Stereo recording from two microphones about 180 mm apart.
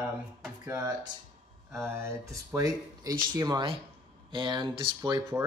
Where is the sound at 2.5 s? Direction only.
20° right (ahead or behind).